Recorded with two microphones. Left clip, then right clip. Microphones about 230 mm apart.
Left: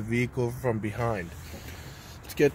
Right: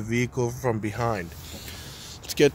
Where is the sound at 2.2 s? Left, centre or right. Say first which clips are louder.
Right 4 dB; centre.